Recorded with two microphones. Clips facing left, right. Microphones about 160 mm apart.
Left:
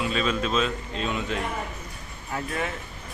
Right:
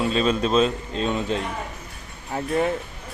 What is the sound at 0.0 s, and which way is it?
Speech, 35° right (ahead or behind).